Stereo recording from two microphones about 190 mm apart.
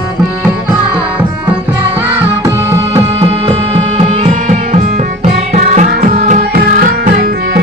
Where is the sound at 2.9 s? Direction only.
30° right (ahead or behind).